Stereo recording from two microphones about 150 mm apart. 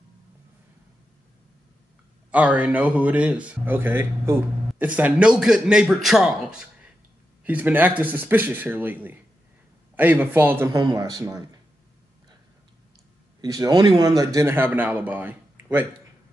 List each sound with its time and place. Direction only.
2.3 s speech: 10° right (ahead or behind)
10.7 s speech: 25° right (ahead or behind)
13.4 s speech: 25° right (ahead or behind)